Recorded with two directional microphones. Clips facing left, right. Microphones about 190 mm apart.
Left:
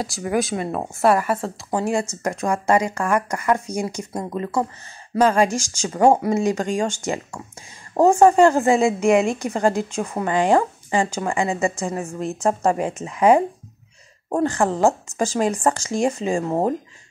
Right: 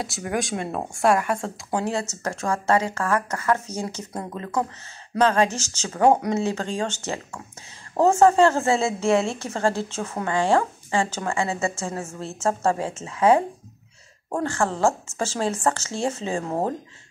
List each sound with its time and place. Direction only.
0.0 s speech: centre (ahead or behind)
2.0 s a woman's voice: 15° left (ahead or behind)